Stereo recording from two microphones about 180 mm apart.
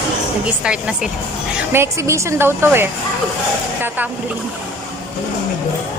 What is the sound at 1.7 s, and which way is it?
A woman's voice, 15° right (ahead or behind).